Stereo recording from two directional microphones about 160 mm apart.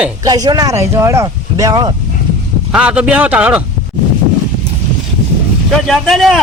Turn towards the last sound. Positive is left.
turn(degrees=0)  # may be behind; listen again after turning